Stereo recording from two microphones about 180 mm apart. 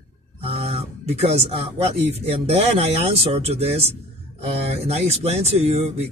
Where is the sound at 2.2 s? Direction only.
35° right (ahead or behind).